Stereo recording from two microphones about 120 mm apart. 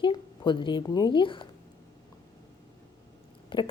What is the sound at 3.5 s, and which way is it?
Speech, 45° left (ahead or behind).